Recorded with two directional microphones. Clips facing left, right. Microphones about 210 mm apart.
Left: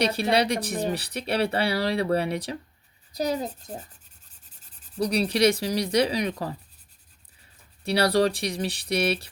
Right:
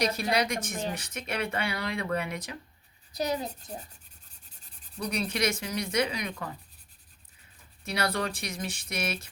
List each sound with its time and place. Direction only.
0.0 s speech: 30° left (ahead or behind)
4.9 s speech: 35° left (ahead or behind)
7.9 s speech: 35° left (ahead or behind)